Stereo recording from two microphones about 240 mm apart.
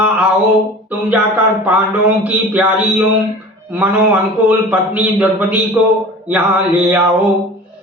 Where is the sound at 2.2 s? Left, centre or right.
Centre.